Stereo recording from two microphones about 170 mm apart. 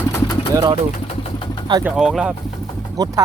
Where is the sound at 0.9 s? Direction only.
45° left (ahead or behind).